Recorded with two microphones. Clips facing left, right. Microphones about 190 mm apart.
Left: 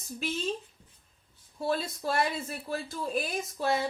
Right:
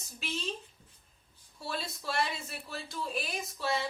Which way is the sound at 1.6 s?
50° left (ahead or behind).